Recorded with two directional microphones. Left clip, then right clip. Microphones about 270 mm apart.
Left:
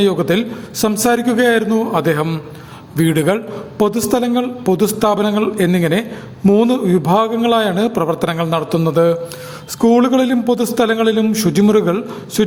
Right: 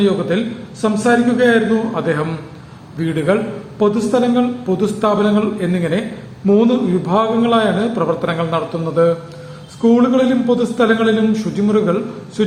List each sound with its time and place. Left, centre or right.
0.0 s a woman's voice: left